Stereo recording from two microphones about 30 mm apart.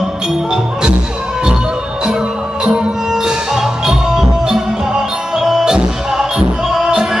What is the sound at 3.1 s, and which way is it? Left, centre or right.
Music, centre.